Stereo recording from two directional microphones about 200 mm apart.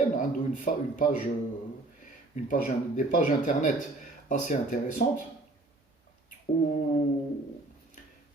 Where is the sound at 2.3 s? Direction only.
40° left (ahead or behind).